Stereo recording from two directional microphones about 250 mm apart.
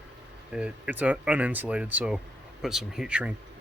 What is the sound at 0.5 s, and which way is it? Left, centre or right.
Speech, centre.